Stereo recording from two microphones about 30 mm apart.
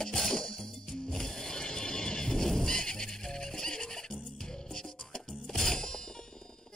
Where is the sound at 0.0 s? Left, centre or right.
Left.